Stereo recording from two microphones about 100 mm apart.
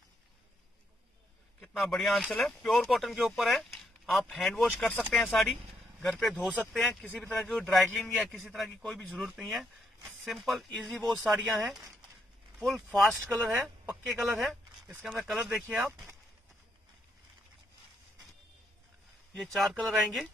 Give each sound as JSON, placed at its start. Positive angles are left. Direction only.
{"t": 1.6, "sound": "speech", "side_deg": 5}
{"t": 7.1, "sound": "speech", "side_deg": 20}
{"t": 7.4, "sound": "speech", "side_deg": 5}
{"t": 19.3, "sound": "speech", "side_deg": 0}